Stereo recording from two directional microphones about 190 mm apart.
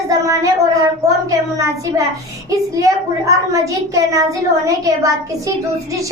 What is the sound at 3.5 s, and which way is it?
A child's voice, 15° right (ahead or behind).